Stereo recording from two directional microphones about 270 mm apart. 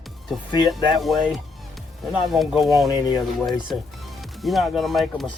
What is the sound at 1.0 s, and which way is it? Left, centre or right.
Speech, centre.